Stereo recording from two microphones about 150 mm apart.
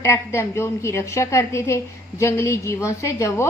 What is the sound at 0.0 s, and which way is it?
A woman's voice, 20° left (ahead or behind).